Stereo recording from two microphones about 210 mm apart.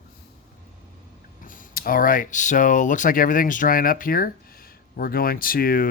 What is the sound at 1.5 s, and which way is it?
Speech, 40° left (ahead or behind).